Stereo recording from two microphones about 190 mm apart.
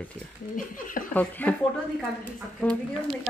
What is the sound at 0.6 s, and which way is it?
Speech, 45° left (ahead or behind).